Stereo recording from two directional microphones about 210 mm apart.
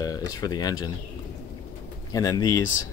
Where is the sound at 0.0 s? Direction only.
15° left (ahead or behind).